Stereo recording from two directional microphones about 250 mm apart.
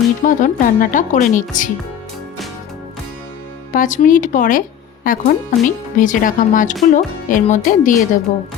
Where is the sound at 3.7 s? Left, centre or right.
Left.